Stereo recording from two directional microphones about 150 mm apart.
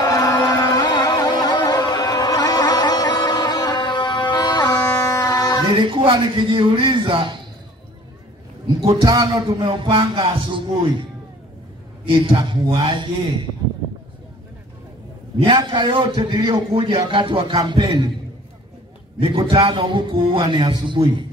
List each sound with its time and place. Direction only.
0.0 s music: 25° left (ahead or behind)
4.8 s music: 15° left (ahead or behind)
5.9 s a man's voice: 35° right (ahead or behind)
8.8 s a man's voice: 25° right (ahead or behind)
12.1 s a man's voice: 35° right (ahead or behind)
15.4 s a man's voice: 30° right (ahead or behind)
19.1 s a man's voice: 35° right (ahead or behind)